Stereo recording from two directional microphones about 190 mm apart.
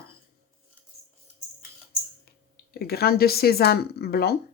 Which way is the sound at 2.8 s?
55° left (ahead or behind).